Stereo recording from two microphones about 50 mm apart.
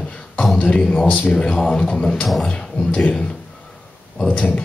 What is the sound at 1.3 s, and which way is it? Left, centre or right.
Speech, centre.